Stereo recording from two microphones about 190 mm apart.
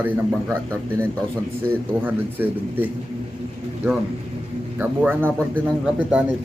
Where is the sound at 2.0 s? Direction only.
10° right (ahead or behind).